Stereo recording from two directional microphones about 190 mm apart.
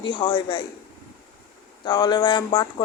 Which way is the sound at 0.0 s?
25° left (ahead or behind).